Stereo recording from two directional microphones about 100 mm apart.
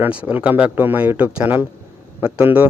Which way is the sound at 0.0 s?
15° right (ahead or behind).